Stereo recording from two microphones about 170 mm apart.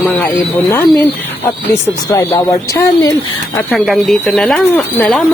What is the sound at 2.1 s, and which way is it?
Speech, 20° left (ahead or behind).